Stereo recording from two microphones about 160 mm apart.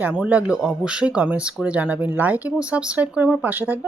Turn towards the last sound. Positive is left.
turn(degrees=-10)  # may be behind; listen again after turning